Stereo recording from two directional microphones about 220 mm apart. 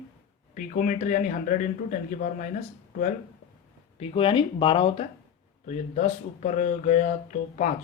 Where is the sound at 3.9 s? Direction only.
25° left (ahead or behind).